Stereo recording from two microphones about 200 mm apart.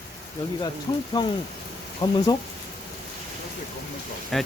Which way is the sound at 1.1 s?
20° left (ahead or behind).